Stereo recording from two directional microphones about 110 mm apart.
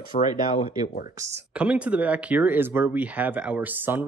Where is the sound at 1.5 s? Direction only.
10° right (ahead or behind).